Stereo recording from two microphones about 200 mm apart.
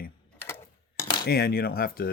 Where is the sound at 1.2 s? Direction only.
50° left (ahead or behind).